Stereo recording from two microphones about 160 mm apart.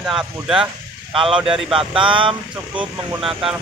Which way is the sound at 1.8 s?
30° right (ahead or behind).